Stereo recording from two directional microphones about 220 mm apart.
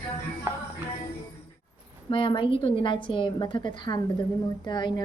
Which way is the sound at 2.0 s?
20° left (ahead or behind).